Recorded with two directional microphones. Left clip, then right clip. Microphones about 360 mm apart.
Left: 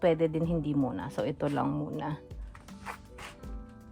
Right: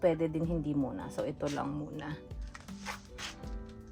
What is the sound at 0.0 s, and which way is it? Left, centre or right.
Speech, centre.